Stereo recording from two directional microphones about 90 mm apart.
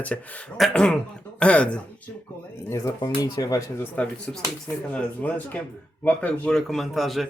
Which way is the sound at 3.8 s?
15° left (ahead or behind).